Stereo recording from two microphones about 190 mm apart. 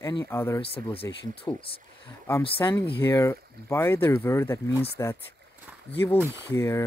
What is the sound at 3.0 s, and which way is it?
Speech, 15° left (ahead or behind).